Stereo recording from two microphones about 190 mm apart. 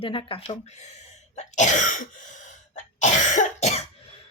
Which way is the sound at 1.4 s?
40° left (ahead or behind).